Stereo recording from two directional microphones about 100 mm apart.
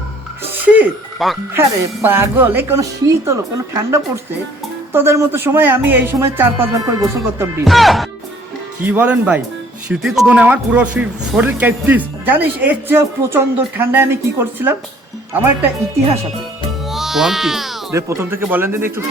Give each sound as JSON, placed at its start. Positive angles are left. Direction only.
{"t": 0.6, "sound": "music", "side_deg": -15}
{"t": 1.2, "sound": "speech", "side_deg": 0}
{"t": 1.5, "sound": "speech", "side_deg": -25}
{"t": 6.7, "sound": "speech", "side_deg": -35}
{"t": 7.6, "sound": "speech", "side_deg": 0}
{"t": 8.8, "sound": "speech", "side_deg": -15}
{"t": 9.9, "sound": "speech", "side_deg": -5}
{"t": 10.2, "sound": "speech", "side_deg": -15}
{"t": 16.9, "sound": "music", "side_deg": -5}
{"t": 17.9, "sound": "speech", "side_deg": -25}